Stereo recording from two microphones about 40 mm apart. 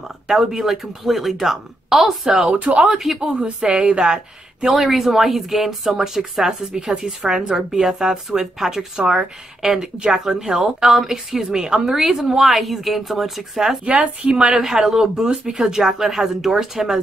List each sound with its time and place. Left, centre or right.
0.3 s speech: centre
2.7 s speech: right
3.0 s a woman's voice: centre
3.8 s speech: right
4.7 s a woman's voice: centre
13.8 s speech: right
14.5 s speech: centre